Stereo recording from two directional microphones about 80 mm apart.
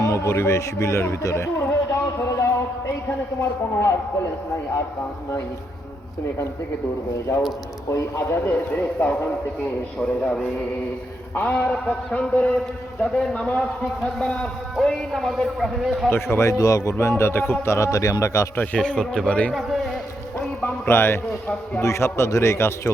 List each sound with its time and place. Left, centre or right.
0.0 s a man's voice: left
7.9 s a man's voice: left
8.5 s speech: left
10.0 s a man's voice: centre
11.3 s a man's voice: left
14.8 s a man's voice: centre
16.0 s a man's voice: left
18.5 s a man's voice: centre
19.5 s a man's voice: centre
20.6 s a man's voice: left